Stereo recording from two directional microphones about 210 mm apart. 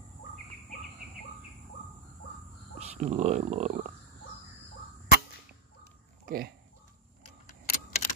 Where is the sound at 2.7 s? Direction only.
30° right (ahead or behind).